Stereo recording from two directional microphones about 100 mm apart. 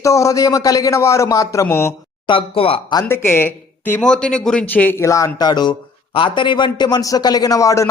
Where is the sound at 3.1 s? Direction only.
20° left (ahead or behind).